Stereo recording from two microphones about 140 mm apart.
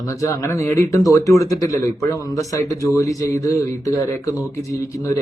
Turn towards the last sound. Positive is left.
turn(degrees=20)  # may be behind; listen again after turning